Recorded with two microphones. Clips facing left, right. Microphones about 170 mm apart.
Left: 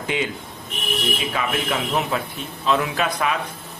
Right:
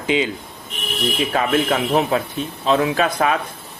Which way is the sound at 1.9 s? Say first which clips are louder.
Right 5 dB; 35° right (ahead or behind).